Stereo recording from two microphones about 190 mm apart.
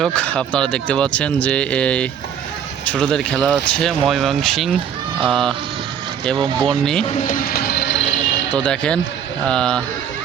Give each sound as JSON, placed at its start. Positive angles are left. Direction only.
{"t": 0.0, "sound": "speech", "side_deg": 5}
{"t": 6.3, "sound": "speech", "side_deg": -25}
{"t": 7.0, "sound": "speech", "side_deg": 30}
{"t": 7.3, "sound": "music", "side_deg": 50}
{"t": 8.5, "sound": "speech", "side_deg": 5}